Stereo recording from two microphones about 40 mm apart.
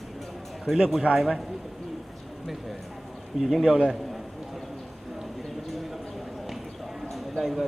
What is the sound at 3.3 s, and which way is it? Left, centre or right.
Speech, centre.